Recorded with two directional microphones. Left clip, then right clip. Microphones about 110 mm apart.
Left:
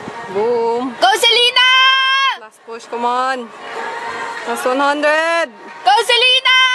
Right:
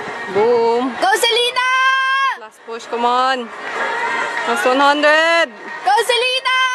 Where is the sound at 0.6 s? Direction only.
5° left (ahead or behind).